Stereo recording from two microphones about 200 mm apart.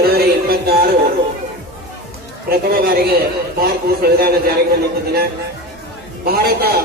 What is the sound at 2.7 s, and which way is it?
Speech, 50° right (ahead or behind).